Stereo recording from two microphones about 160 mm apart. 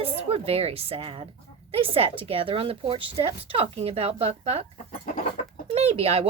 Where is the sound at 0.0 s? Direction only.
35° right (ahead or behind).